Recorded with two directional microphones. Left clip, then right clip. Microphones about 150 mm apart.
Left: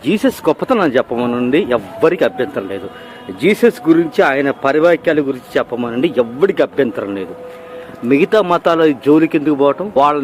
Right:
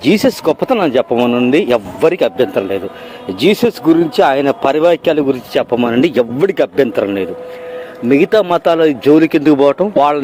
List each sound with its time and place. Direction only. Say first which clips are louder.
0.0 s speech: right 4 dB; 30° right (ahead or behind)
0.4 s speech: right 1 dB; 15° right (ahead or behind)
1.5 s speech: right 3 dB; 30° right (ahead or behind)
4.6 s speech: left 1 dB; 35° right (ahead or behind)
6.0 s speech: left 2 dB; 40° right (ahead or behind)